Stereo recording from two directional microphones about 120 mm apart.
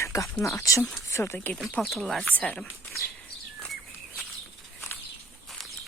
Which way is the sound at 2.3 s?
10° left (ahead or behind).